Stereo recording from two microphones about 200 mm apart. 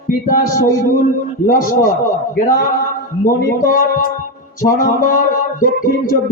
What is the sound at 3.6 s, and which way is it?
A man's voice, 40° left (ahead or behind).